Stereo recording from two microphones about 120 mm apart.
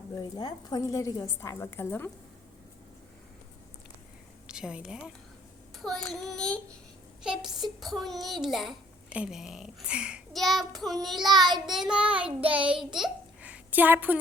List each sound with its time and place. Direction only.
0.2 s a woman's voice: 35° left (ahead or behind)
4.4 s a woman's voice: 5° right (ahead or behind)
7.2 s a child's voice: 5° right (ahead or behind)
11.5 s child singing: centre (ahead or behind)
13.0 s babbling: 10° right (ahead or behind)